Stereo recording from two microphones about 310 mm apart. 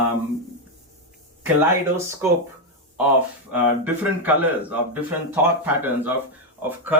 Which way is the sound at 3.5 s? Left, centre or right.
Centre.